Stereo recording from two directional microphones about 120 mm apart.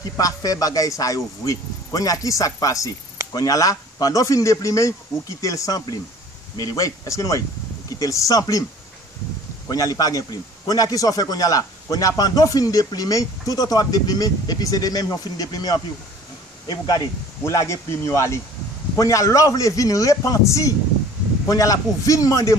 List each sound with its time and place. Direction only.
0.2 s a man's voice: 30° left (ahead or behind)
9.7 s a man's voice: 30° left (ahead or behind)
17.4 s a man's voice: 25° left (ahead or behind)